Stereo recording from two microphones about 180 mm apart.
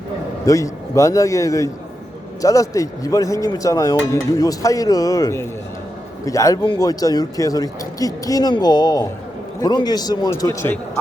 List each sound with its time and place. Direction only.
0.4 s a man's voice: 15° left (ahead or behind)